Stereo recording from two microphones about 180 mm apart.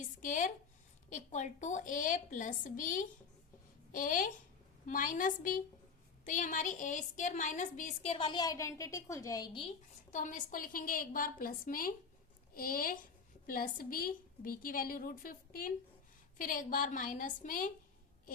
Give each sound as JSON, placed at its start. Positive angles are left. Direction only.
{"t": 0.0, "sound": "a sound", "side_deg": 45}
{"t": 1.1, "sound": "a woman's voice", "side_deg": 40}
{"t": 10.1, "sound": "a woman's voice", "side_deg": 45}